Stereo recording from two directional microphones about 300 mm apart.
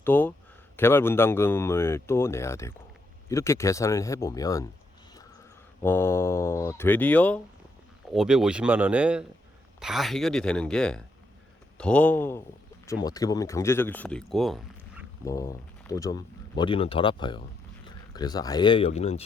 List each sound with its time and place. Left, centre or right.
0.0 s speech: centre
5.8 s speech: centre
15.3 s speech: centre